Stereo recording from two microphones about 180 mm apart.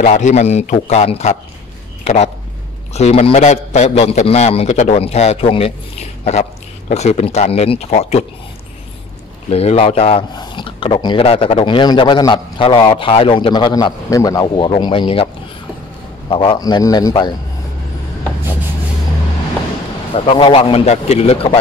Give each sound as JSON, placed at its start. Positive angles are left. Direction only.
{"t": 0.0, "sound": "a man's voice", "side_deg": 40}
{"t": 9.5, "sound": "speech", "side_deg": 35}
{"t": 16.3, "sound": "speech", "side_deg": 25}
{"t": 20.2, "sound": "a man's voice", "side_deg": 30}